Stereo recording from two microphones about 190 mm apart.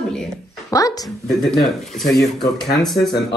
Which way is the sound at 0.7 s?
20° left (ahead or behind).